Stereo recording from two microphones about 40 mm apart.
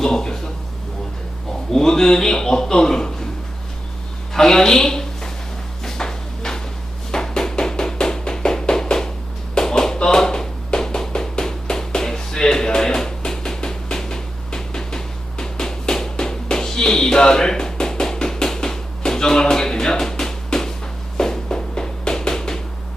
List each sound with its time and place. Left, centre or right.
0.0 s speech: centre
1.7 s a man's voice: centre
4.4 s a woman's voice: centre
5.8 s a sound: centre